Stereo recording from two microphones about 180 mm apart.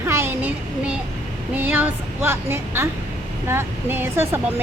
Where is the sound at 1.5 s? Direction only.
10° right (ahead or behind).